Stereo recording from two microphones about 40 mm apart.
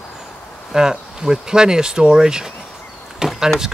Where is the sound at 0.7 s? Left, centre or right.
Centre.